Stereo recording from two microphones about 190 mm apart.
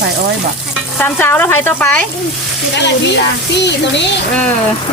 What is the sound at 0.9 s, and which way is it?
Speech, 10° left (ahead or behind).